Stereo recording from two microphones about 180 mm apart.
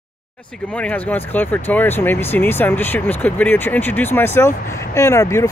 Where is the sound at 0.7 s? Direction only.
10° left (ahead or behind).